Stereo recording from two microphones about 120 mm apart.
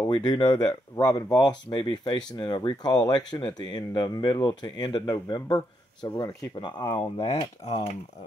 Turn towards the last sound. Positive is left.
turn(degrees=60)  # may be behind; listen again after turning